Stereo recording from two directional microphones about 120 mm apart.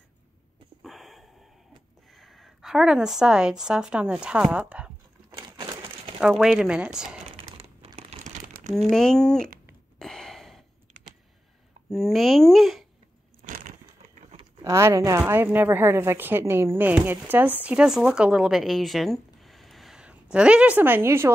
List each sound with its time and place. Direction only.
0.8 s a sound: centre (ahead or behind)
2.1 s a woman's voice: centre (ahead or behind)
6.1 s speech: 5° right (ahead or behind)
7.5 s crumpling: 55° right (ahead or behind); by 8.8 s 75° right (ahead or behind)
8.8 s speech: 5° left (ahead or behind)
9.9 s gasp: 5° left (ahead or behind)
11.9 s speech: centre (ahead or behind)
13.4 s a sound: 90° right
14.6 s a woman's voice: 25° right (ahead or behind)